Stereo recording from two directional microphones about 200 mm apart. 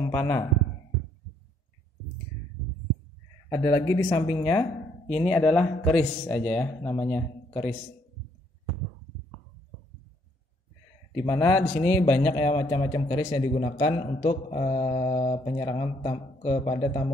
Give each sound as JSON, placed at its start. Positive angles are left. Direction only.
{"t": 0.1, "sound": "speech", "side_deg": 10}
{"t": 3.4, "sound": "speech", "side_deg": 15}
{"t": 5.1, "sound": "speech", "side_deg": 0}
{"t": 11.2, "sound": "speech", "side_deg": 15}
{"t": 12.4, "sound": "speech", "side_deg": 20}
{"t": 13.5, "sound": "a man's voice", "side_deg": 35}
{"t": 13.7, "sound": "speech", "side_deg": 25}